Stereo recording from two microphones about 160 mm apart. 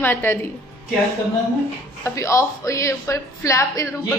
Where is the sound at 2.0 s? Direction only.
20° left (ahead or behind).